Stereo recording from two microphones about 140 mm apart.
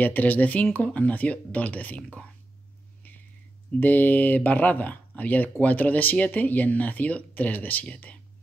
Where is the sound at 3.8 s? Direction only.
10° left (ahead or behind).